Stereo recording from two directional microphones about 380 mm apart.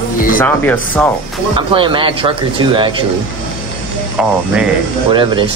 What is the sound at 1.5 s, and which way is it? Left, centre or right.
Speech, centre.